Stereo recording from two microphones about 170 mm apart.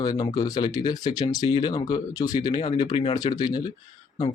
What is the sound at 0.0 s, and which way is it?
Speech, 25° left (ahead or behind).